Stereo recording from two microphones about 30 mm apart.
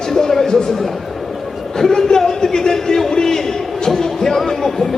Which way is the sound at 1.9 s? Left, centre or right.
Centre.